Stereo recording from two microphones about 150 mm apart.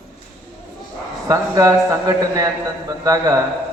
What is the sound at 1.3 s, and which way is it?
A man's voice, 20° right (ahead or behind).